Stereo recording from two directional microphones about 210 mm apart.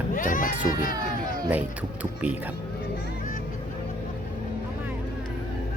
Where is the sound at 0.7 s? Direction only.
40° left (ahead or behind).